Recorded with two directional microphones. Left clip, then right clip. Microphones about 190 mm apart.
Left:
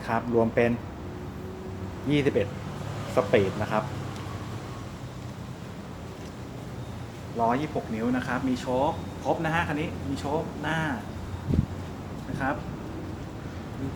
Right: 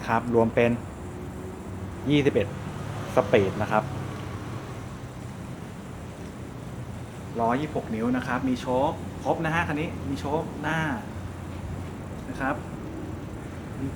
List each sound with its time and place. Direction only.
0.0 s speech: 20° right (ahead or behind)
2.0 s speech: 15° right (ahead or behind)
7.3 s speech: 10° right (ahead or behind)